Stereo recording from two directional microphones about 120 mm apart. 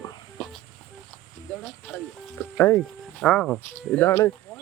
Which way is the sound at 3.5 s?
20° left (ahead or behind).